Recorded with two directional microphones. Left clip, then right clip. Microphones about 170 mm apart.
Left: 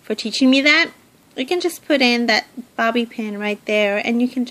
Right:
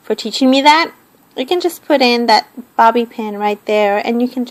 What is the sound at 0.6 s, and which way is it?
Speech, 50° left (ahead or behind).